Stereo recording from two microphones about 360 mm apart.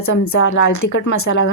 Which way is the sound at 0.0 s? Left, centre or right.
Left.